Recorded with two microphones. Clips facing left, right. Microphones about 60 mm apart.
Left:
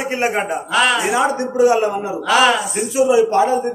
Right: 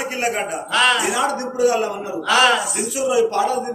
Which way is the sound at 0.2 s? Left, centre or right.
Left.